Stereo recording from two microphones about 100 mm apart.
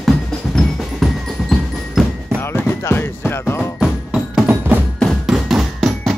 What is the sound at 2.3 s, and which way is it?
Music, 20° left (ahead or behind).